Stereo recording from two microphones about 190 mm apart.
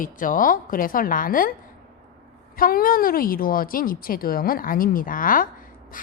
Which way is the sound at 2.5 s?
50° left (ahead or behind).